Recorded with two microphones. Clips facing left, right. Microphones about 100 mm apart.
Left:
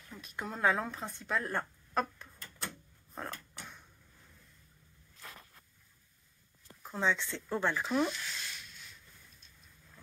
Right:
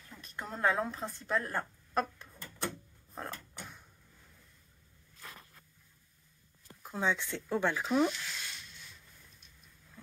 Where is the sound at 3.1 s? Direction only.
Centre (ahead or behind).